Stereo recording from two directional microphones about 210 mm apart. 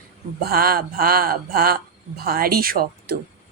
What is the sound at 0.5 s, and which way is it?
Speech, 45° right (ahead or behind).